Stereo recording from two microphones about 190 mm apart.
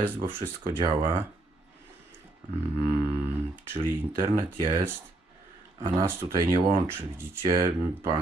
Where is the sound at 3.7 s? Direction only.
10° right (ahead or behind).